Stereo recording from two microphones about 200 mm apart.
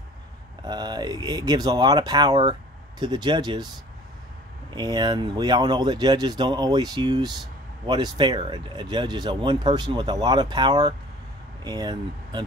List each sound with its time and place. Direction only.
0.7 s speech: 20° right (ahead or behind)
4.7 s speech: 20° right (ahead or behind)